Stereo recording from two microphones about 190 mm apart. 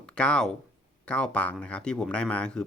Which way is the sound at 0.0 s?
5° left (ahead or behind).